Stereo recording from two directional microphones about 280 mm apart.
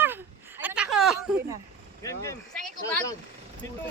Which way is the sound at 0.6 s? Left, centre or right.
Centre.